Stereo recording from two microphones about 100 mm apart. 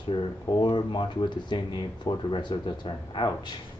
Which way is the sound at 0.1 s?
50° left (ahead or behind).